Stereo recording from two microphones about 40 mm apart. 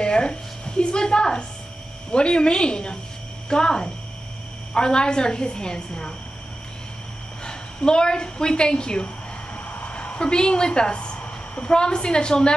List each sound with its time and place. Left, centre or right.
0.0 s a woman's voice: left
7.4 s a woman's voice: left
9.8 s a sound: left
11.7 s a woman's voice: left